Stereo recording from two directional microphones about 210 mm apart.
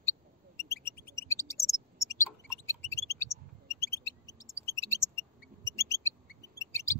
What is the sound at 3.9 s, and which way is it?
Music, 15° left (ahead or behind).